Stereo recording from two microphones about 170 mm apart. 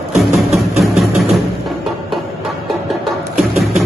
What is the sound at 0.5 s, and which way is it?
Music, centre (ahead or behind).